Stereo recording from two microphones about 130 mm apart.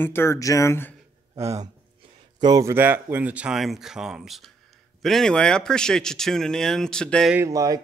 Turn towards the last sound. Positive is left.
turn(degrees=-25)  # may be behind; listen again after turning